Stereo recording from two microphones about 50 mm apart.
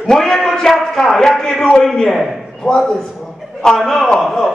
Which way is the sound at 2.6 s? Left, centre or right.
Centre.